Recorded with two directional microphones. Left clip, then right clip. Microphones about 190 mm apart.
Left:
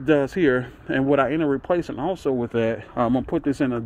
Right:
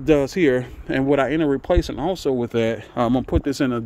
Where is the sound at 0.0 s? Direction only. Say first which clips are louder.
Right 2 dB; 25° right (ahead or behind).